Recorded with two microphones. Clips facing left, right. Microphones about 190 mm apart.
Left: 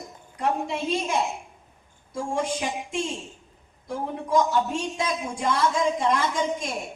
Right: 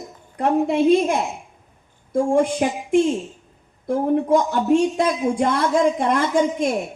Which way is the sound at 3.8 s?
55° right (ahead or behind).